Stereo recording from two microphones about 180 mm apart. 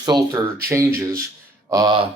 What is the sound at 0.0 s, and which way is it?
Speech, 20° right (ahead or behind).